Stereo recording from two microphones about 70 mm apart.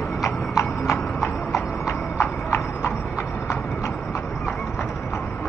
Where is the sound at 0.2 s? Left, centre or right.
Left.